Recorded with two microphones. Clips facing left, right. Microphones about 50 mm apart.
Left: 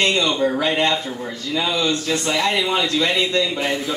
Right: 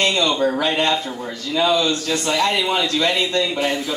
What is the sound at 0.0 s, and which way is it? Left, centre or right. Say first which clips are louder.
Speech: even; left.